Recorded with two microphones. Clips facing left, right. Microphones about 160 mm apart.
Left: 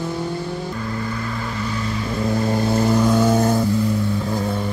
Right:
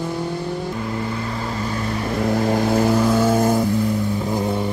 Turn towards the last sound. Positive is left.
turn(degrees=-5)  # may be behind; listen again after turning